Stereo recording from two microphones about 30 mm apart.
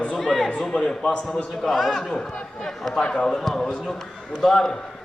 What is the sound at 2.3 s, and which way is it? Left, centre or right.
Speech, left.